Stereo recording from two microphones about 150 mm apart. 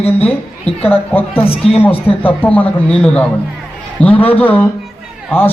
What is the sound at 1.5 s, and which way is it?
Speech, 40° left (ahead or behind).